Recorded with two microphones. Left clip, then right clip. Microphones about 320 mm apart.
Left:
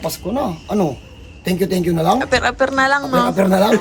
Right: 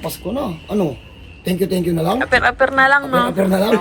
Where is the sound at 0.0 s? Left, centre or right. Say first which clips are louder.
Left 2 dB; centre.